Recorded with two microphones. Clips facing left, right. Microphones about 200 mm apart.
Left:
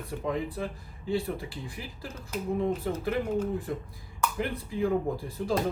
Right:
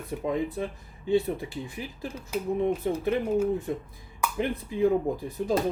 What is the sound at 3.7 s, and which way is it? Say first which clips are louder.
Speech: right 3 dB; 20° right (ahead or behind).